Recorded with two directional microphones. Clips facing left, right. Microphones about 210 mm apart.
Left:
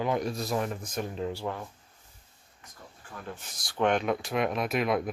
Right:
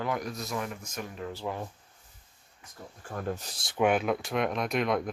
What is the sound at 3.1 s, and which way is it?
Speech, 40° right (ahead or behind).